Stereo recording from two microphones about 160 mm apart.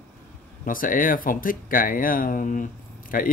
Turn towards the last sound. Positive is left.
turn(degrees=60)  # may be behind; listen again after turning